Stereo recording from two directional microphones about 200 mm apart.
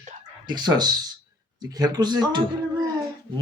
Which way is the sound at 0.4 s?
20° right (ahead or behind).